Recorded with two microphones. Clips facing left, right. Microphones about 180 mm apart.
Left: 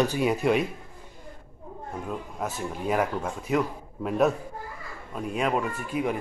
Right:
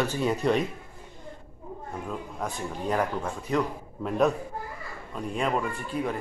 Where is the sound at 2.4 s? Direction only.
5° left (ahead or behind).